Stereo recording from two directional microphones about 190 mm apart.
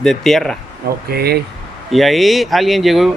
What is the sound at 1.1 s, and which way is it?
Speech, 55° right (ahead or behind).